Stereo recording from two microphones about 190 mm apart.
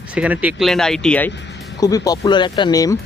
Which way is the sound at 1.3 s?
70° left (ahead or behind).